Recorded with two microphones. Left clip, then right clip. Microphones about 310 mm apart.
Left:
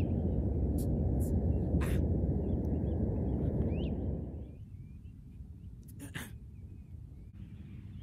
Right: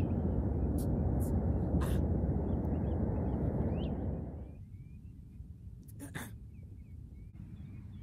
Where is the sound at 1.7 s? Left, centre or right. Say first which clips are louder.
Left 1 dB; centre.